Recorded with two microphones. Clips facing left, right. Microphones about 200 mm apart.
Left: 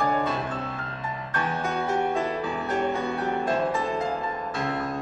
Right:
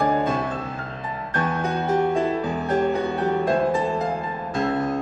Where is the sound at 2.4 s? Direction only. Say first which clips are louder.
Right 5 dB; 40° right (ahead or behind).